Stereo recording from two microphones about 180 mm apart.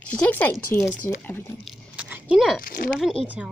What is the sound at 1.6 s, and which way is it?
Biting, 5° right (ahead or behind).